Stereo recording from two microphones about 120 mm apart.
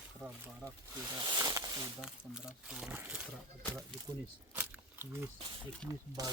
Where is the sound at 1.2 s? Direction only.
35° right (ahead or behind).